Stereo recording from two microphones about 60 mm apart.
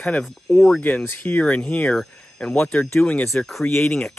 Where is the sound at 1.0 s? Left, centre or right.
Left.